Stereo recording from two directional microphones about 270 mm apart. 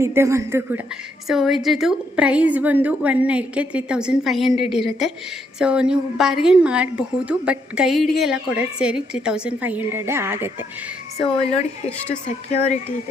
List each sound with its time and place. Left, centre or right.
0.0 s a woman's voice: centre
12.5 s speech: left